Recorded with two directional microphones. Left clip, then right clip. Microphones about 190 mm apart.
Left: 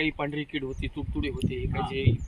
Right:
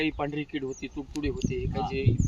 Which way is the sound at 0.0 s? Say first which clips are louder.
Left 1 dB; 10° left (ahead or behind).